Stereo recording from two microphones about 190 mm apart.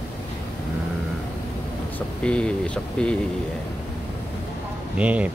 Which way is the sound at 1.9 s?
5° left (ahead or behind).